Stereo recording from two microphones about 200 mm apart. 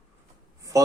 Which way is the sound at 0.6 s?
15° right (ahead or behind).